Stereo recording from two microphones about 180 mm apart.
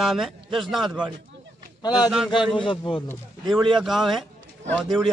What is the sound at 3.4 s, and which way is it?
Speech, centre (ahead or behind).